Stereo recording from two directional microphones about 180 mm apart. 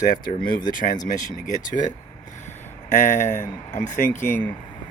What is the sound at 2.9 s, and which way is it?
Speech, 45° left (ahead or behind).